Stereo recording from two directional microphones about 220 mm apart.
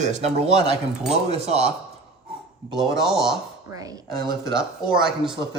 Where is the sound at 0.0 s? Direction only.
30° right (ahead or behind).